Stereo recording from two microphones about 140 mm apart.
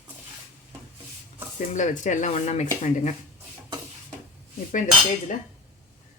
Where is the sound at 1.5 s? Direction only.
60° left (ahead or behind).